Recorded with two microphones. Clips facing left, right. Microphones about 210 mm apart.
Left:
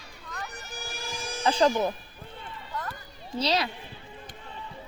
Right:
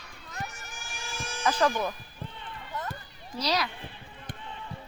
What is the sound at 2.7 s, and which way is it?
Run, 20° right (ahead or behind).